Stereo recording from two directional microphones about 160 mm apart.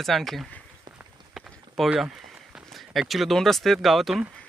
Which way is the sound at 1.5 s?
Centre (ahead or behind).